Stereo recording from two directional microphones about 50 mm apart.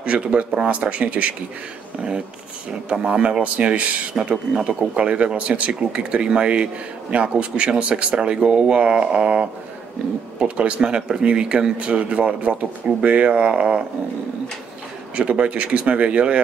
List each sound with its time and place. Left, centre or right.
0.0 s speech: right
2.9 s speech: right
15.1 s speech: right